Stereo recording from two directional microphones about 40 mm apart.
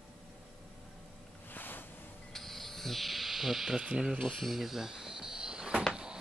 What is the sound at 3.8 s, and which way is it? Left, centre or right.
Speech, right.